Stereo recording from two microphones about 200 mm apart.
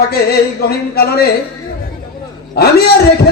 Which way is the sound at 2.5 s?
50° left (ahead or behind).